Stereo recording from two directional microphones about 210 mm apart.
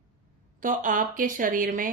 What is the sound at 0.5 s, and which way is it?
A woman's voice, 40° right (ahead or behind).